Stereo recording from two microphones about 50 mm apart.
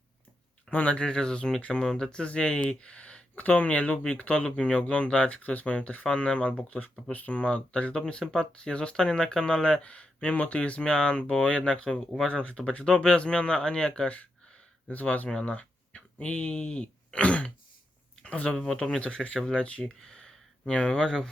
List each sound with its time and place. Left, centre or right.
0.7 s speech: left
3.9 s speech: centre
8.2 s speech: centre
8.5 s speech: left
14.8 s speech: left
15.4 s a sound: left
16.1 s speech: left
19.8 s a sound: centre
20.9 s speech: centre